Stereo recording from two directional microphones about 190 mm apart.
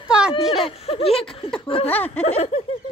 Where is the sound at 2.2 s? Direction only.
35° left (ahead or behind).